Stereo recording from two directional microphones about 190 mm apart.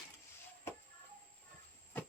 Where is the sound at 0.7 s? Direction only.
15° left (ahead or behind).